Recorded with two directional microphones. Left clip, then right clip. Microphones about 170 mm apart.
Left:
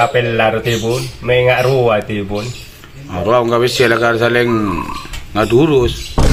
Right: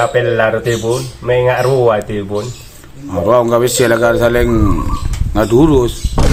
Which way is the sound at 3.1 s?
45° right (ahead or behind).